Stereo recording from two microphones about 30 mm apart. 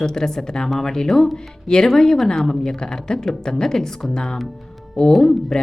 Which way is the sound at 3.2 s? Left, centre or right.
Centre.